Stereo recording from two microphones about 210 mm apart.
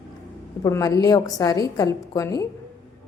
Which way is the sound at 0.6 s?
15° left (ahead or behind).